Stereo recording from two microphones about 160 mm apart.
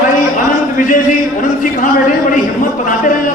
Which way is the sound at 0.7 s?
55° left (ahead or behind).